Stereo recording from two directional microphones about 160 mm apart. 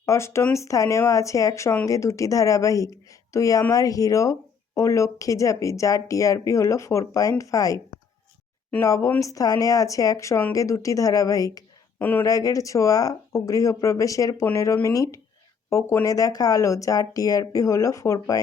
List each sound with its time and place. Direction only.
0.0 s speech: 20° left (ahead or behind)
11.9 s speech: 10° left (ahead or behind)